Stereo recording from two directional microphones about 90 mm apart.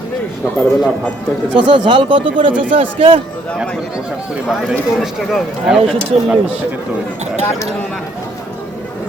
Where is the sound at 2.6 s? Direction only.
90° right.